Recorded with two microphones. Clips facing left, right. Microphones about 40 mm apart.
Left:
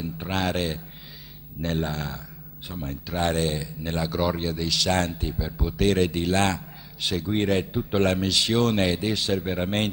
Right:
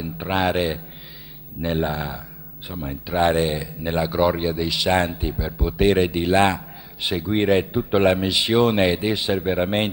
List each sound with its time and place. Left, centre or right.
0.0 s a man's voice: centre